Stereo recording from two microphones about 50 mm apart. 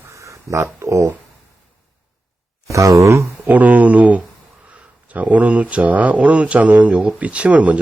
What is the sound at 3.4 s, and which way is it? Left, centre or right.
Speech, right.